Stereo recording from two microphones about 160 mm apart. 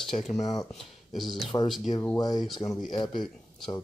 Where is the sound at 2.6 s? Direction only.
35° left (ahead or behind).